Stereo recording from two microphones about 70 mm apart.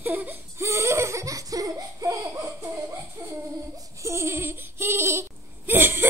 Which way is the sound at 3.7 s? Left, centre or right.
Right.